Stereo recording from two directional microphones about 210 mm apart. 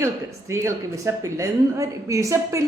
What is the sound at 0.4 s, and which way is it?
Speech, 15° right (ahead or behind).